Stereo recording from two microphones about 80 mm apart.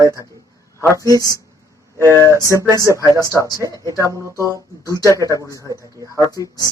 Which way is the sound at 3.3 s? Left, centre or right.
Left.